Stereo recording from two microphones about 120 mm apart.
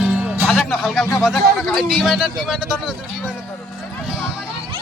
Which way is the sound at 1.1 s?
5° right (ahead or behind).